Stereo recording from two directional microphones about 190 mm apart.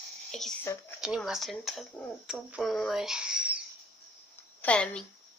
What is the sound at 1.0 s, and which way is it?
Speech, 5° right (ahead or behind).